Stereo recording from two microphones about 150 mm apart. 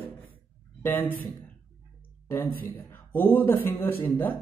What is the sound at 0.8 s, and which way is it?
Speech, 15° left (ahead or behind).